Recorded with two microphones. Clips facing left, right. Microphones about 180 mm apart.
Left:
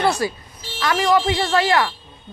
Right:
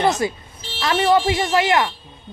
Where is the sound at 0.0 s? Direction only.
20° right (ahead or behind).